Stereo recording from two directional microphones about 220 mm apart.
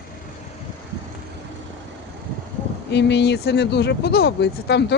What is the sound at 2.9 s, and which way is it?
Speech, 50° left (ahead or behind).